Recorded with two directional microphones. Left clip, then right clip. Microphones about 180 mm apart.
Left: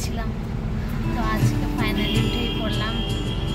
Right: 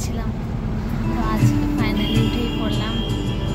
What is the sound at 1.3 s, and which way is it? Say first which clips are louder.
Music: right 6 dB; centre (ahead or behind).